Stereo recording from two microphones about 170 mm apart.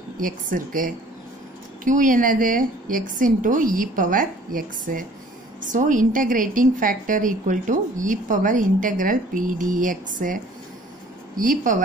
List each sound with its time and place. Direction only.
0.2 s a woman's voice: 55° right (ahead or behind)